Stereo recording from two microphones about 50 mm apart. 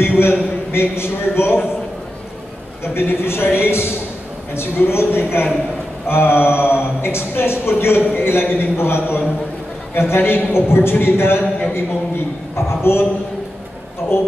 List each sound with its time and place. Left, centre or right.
0.0 s a man's voice: left
2.8 s speech: left
12.5 s a man's voice: left
14.1 s speech: left